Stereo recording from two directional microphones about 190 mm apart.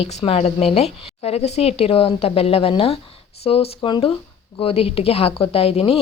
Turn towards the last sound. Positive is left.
turn(degrees=30)  # may be behind; listen again after turning